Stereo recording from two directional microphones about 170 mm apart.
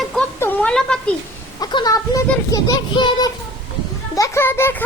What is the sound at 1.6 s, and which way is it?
A child's voice, 25° left (ahead or behind).